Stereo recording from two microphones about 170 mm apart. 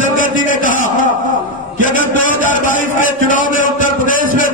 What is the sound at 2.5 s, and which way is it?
A man's voice, 50° left (ahead or behind).